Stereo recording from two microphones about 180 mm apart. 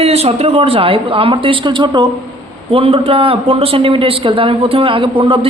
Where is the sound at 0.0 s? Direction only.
35° right (ahead or behind).